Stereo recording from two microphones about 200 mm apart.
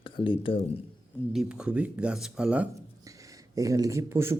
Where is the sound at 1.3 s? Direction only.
5° right (ahead or behind).